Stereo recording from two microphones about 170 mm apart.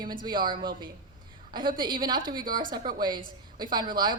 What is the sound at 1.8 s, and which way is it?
Speech, 25° right (ahead or behind).